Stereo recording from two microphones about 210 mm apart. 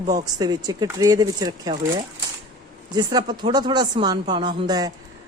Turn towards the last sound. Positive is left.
turn(degrees=-20)  # may be behind; listen again after turning